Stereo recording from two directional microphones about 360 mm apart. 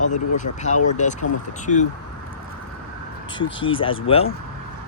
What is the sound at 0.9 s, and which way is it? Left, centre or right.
Speech, centre.